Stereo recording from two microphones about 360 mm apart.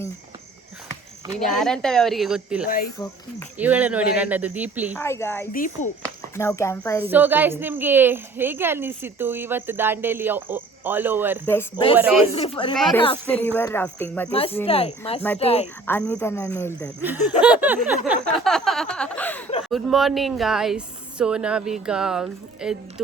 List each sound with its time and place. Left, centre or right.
1.5 s a woman's voice: centre
2.6 s speech: left
3.6 s a woman's voice: centre
4.9 s speech: centre
5.5 s speech: left
6.3 s speech: centre
7.0 s a woman's voice: centre
11.4 s a woman's voice: centre
12.3 s speech: centre
12.7 s a woman's voice: centre
15.9 s a woman's voice: centre
17.4 s a woman's voice: centre